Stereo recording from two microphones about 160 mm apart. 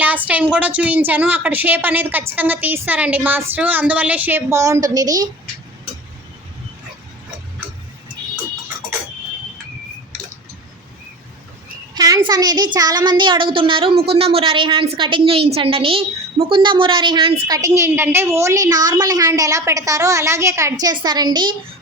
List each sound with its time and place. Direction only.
0.0 s a woman's voice: 10° right (ahead or behind)
11.9 s a child's voice: 25° right (ahead or behind)